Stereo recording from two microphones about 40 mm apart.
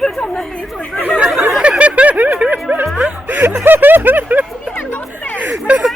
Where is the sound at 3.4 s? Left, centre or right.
Right.